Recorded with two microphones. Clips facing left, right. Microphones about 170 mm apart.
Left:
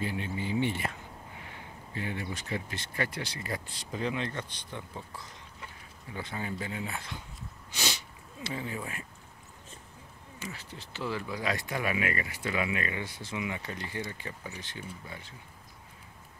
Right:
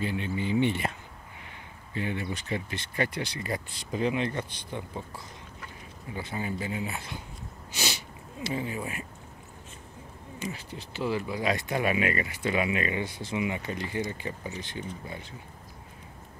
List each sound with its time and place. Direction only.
0.0 s speech: 20° right (ahead or behind)
2.0 s speech: 20° right (ahead or behind)
6.1 s speech: 10° right (ahead or behind)
7.7 s sneeze: 5° right (ahead or behind)
8.5 s speech: 15° right (ahead or behind)
10.4 s speech: 15° right (ahead or behind)